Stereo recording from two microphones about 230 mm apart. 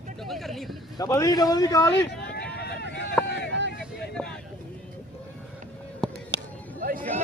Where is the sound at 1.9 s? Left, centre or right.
Left.